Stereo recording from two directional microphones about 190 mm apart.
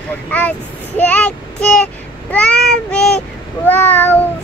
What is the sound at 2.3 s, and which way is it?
Speech, 5° left (ahead or behind).